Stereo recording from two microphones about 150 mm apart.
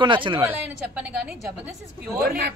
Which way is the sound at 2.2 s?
85° right.